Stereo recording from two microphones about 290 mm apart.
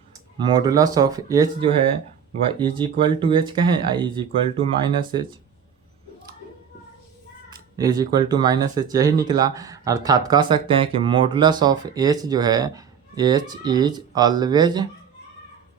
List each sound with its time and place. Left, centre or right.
0.3 s speech: centre
7.5 s speech: centre